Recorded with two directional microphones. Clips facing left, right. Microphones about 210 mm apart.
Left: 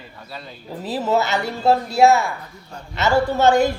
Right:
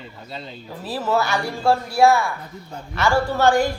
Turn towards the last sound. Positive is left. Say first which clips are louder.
# left 2 dB
turn(degrees=20)  # may be behind; listen again after turning